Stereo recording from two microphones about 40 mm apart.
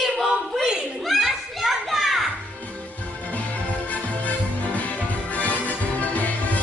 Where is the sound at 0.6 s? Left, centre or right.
Centre.